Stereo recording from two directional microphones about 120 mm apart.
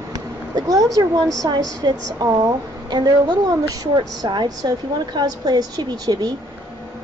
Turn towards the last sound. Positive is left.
turn(degrees=-30)  # may be behind; listen again after turning